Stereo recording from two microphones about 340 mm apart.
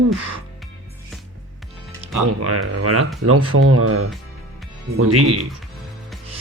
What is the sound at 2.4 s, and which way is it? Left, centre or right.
Speech, right.